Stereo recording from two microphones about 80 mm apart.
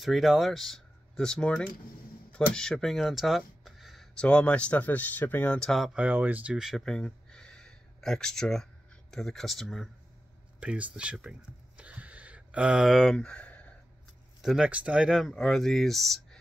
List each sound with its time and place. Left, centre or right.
0.0 s speech: centre; by 5.6 s left
5.6 s speech: centre
5.9 s speech: centre
6.8 s a sound: centre
9.1 s speech: centre
10.6 s a sound: centre
12.9 s speech: centre
14.4 s speech: centre